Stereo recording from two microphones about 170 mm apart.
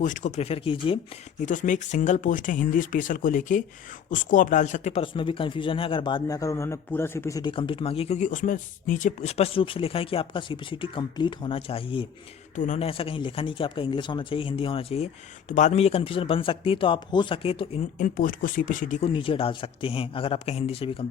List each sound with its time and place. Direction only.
0.0 s speech: 50° left (ahead or behind); by 0.9 s 30° left (ahead or behind)
1.5 s speech: 45° left (ahead or behind); by 12.0 s 30° left (ahead or behind)
12.5 s speech: 45° left (ahead or behind)
17.9 s speech: 55° left (ahead or behind)
19.0 s speech: 30° left (ahead or behind)